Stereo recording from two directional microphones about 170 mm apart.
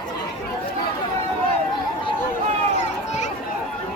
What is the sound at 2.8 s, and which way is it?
Children playing, 40° left (ahead or behind).